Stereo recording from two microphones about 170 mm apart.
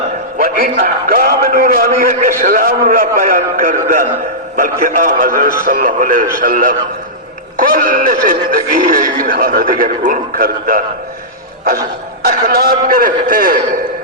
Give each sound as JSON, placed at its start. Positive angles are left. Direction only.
{"t": 0.3, "sound": "a man's voice", "side_deg": -60}
{"t": 12.2, "sound": "speech", "side_deg": -60}